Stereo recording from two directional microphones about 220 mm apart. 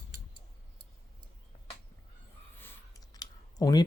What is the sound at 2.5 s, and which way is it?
Clicking, 10° left (ahead or behind).